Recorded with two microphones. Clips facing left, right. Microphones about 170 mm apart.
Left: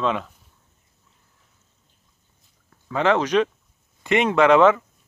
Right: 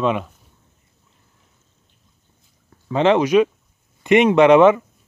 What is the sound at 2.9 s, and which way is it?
Speech, 20° right (ahead or behind).